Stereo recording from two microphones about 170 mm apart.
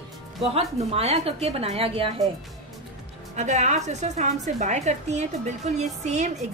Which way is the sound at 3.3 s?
45° right (ahead or behind).